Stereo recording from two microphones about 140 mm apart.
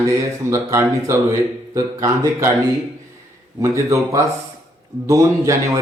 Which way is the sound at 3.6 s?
20° right (ahead or behind).